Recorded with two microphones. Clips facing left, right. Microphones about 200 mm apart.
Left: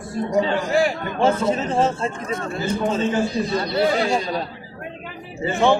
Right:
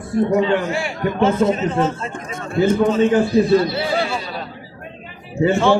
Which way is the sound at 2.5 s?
55° right (ahead or behind).